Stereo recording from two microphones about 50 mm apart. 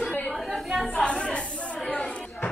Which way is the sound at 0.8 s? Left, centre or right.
Centre.